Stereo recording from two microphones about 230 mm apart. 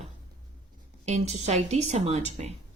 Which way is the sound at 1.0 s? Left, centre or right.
Right.